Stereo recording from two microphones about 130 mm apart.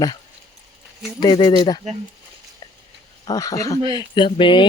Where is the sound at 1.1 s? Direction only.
35° left (ahead or behind).